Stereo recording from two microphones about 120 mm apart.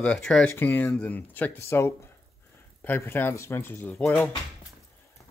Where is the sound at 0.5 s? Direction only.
15° left (ahead or behind).